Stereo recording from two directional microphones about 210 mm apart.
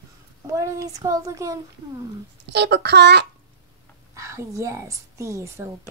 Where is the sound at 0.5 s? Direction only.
15° right (ahead or behind).